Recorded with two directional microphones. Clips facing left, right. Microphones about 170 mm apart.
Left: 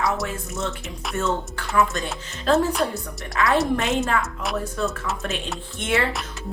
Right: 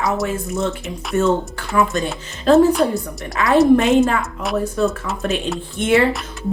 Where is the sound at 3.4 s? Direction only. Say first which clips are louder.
Right 8 dB; 15° right (ahead or behind).